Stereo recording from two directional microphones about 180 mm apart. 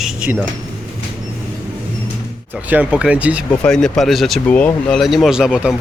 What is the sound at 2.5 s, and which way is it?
Speech, 10° right (ahead or behind).